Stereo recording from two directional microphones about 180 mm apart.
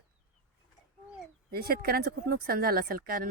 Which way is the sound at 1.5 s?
55° right (ahead or behind).